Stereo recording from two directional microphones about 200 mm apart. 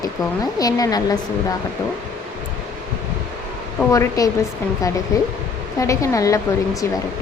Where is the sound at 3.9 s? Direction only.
15° left (ahead or behind).